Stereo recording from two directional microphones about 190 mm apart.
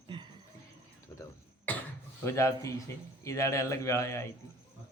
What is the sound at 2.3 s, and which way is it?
Speech, 15° left (ahead or behind).